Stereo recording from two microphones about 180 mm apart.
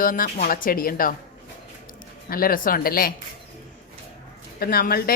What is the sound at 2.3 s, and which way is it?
Speech, 55° left (ahead or behind).